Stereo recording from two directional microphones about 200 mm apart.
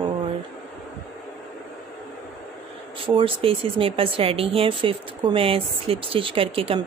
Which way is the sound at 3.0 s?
25° right (ahead or behind).